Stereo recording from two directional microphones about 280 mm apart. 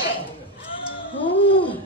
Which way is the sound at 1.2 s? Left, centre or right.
Centre.